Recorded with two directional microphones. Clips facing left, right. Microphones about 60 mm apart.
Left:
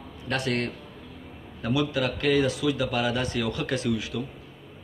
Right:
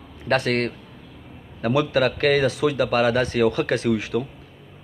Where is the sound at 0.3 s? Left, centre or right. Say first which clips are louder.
Right 6 dB; right.